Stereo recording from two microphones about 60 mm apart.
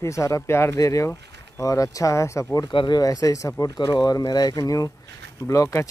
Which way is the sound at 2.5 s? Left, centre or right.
Left.